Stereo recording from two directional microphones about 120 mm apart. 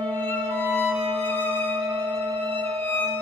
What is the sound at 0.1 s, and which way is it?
Music, 15° left (ahead or behind).